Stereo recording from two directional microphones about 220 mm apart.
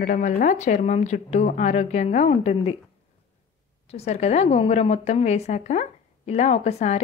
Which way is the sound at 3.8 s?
30° left (ahead or behind).